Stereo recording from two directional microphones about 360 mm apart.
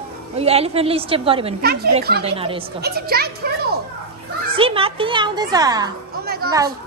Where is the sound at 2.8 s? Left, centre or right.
Right.